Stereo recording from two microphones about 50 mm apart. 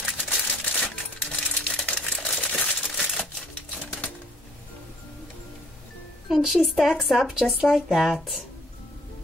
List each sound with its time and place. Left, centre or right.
0.2 s typewriter: centre
2.1 s crumpling: centre
2.4 s crumpling: left
2.8 s typewriter: centre
6.2 s speech: centre